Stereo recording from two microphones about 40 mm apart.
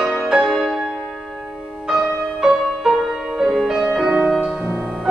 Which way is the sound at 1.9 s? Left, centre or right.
Centre.